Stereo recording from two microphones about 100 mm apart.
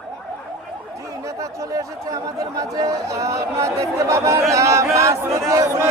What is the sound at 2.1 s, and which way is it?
Speech, 40° right (ahead or behind).